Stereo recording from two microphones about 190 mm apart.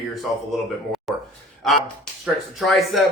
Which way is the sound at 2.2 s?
Centre (ahead or behind).